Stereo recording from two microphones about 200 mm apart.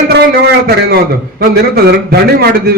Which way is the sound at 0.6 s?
50° right (ahead or behind).